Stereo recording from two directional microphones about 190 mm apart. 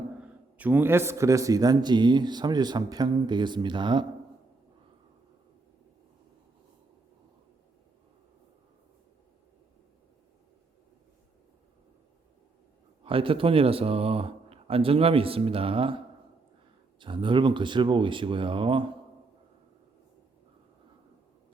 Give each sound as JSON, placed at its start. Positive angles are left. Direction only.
{"t": 0.2, "sound": "a man's voice", "side_deg": -10}
{"t": 13.1, "sound": "a man's voice", "side_deg": -30}